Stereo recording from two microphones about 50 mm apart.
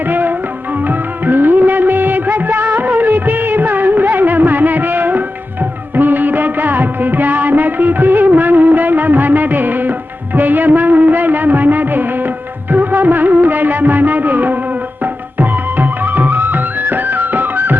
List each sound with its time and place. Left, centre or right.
0.1 s music: right
0.9 s music of bollywood: right
15.4 s music: right